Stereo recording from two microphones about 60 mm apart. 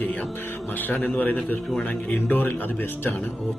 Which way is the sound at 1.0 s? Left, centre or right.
Left.